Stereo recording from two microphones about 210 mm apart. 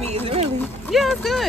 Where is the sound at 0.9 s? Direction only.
Centre (ahead or behind).